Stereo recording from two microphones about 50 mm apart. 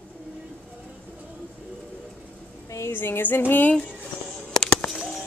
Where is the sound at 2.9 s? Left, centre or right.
Left.